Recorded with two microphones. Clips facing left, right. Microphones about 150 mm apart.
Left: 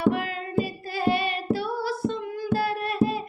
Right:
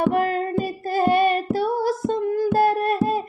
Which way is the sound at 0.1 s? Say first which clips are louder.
Right 6 dB; 45° right (ahead or behind).